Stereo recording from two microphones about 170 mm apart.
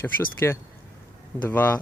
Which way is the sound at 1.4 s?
10° left (ahead or behind).